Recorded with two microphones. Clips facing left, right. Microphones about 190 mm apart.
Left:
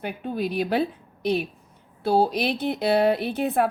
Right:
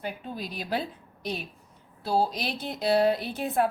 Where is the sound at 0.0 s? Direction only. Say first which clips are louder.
Left 7 dB; 60° left (ahead or behind).